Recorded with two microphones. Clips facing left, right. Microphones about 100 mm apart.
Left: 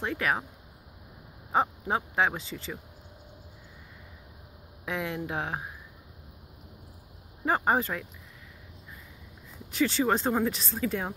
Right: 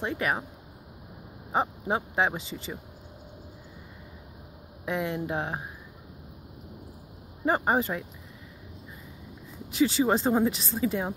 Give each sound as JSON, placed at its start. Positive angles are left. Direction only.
{"t": 0.0, "sound": "speech", "side_deg": -5}
{"t": 1.5, "sound": "speech", "side_deg": -5}
{"t": 2.5, "sound": "a woman's voice", "side_deg": -15}
{"t": 4.8, "sound": "speech", "side_deg": 0}
{"t": 7.4, "sound": "speech", "side_deg": -5}
{"t": 9.8, "sound": "a woman's voice", "side_deg": -10}